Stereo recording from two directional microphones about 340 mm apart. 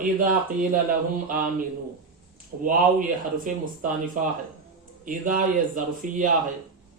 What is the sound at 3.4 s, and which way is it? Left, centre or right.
Speech, right.